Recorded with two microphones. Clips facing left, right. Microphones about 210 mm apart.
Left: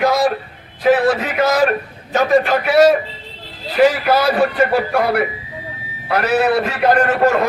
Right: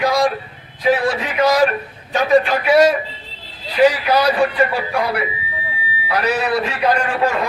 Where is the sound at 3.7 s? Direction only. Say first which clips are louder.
Left 1 dB; 45° left (ahead or behind).